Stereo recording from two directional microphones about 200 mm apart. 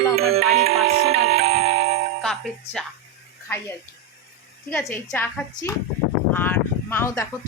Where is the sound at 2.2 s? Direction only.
5° left (ahead or behind).